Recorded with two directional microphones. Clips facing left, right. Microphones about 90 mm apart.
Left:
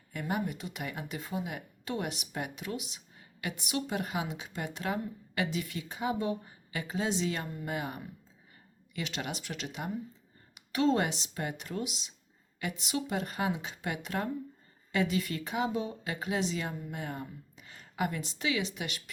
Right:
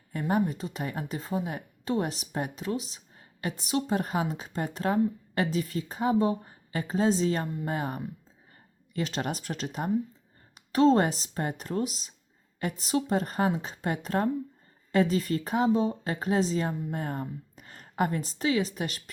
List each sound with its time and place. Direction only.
0.1 s a woman's voice: 35° right (ahead or behind)